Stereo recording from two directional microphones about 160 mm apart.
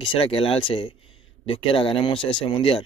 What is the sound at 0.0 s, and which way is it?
Speech, 35° left (ahead or behind).